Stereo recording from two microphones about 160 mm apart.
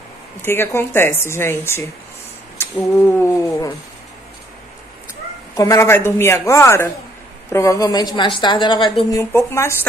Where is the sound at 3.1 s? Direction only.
20° left (ahead or behind).